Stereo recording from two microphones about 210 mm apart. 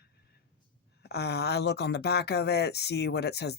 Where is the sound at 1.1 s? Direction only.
50° left (ahead or behind).